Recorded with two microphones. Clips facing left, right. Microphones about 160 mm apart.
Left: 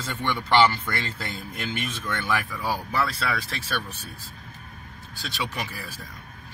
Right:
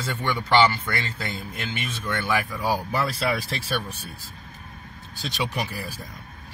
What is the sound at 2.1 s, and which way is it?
Speech, 5° right (ahead or behind).